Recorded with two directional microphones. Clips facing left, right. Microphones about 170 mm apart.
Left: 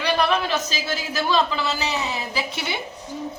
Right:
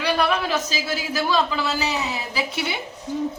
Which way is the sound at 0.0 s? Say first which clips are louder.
Even; 10° right (ahead or behind).